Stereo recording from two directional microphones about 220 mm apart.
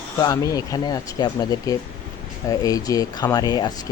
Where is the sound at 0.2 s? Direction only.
15° left (ahead or behind).